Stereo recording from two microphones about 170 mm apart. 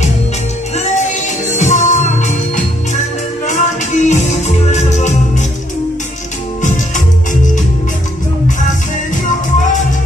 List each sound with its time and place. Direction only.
0.7 s music: 40° left (ahead or behind)